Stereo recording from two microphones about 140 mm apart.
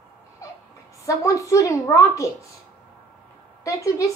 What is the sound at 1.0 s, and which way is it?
A woman's voice, 20° left (ahead or behind).